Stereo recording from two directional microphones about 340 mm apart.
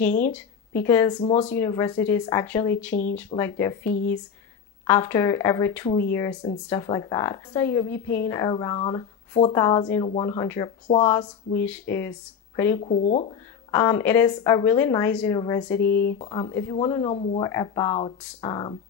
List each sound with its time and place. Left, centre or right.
0.0 s a woman's voice: centre
3.9 s speech: left
4.8 s a woman's voice: centre
12.8 s speech: centre
13.7 s a woman's voice: centre
15.9 s speech: left
16.3 s a woman's voice: centre